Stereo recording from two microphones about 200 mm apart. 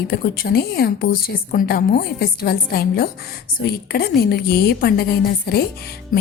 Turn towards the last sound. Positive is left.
turn(degrees=45)  # may be behind; listen again after turning